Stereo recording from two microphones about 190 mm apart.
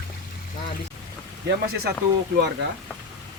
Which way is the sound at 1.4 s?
60° right (ahead or behind).